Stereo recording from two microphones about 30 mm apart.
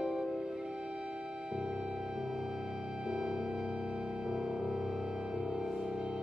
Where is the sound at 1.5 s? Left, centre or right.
Right.